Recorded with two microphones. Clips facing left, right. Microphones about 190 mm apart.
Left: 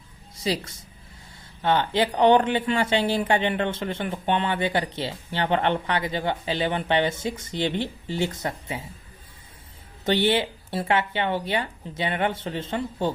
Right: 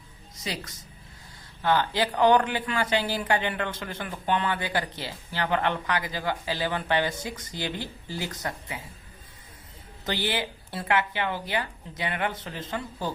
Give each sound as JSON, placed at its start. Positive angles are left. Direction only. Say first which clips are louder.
{"t": 0.3, "sound": "a woman's voice", "louder": "left 8 dB", "side_deg": 30}
{"t": 10.1, "sound": "speech", "louder": "left 7 dB", "side_deg": 25}